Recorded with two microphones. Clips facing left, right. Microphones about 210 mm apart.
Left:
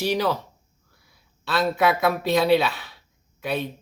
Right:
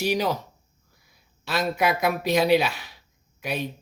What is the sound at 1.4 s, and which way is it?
A woman's voice, 15° right (ahead or behind).